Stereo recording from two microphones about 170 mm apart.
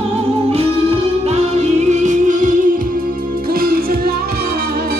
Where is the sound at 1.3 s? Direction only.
40° right (ahead or behind).